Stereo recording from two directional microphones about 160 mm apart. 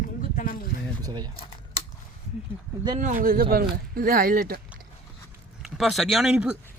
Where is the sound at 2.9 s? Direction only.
55° right (ahead or behind).